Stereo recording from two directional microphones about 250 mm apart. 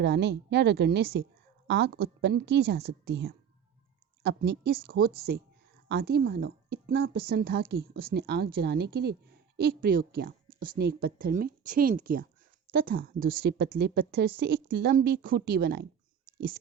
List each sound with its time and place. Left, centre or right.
0.0 s a woman's voice: right